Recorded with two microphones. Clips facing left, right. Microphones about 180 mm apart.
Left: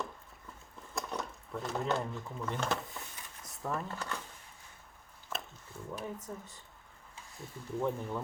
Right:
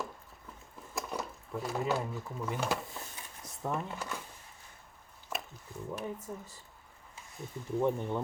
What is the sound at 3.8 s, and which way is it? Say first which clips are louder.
Speech: even; 10° right (ahead or behind).